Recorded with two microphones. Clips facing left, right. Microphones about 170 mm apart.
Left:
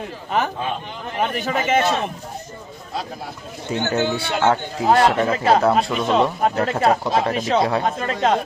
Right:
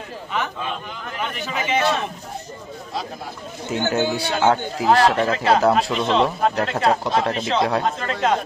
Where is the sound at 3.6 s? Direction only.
Centre (ahead or behind).